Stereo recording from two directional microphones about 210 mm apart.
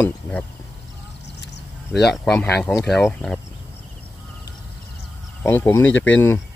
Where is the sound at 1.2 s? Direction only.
55° left (ahead or behind).